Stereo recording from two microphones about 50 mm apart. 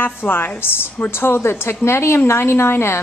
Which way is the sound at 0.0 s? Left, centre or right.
Left.